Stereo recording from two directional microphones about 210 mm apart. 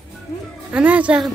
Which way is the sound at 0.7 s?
5° right (ahead or behind).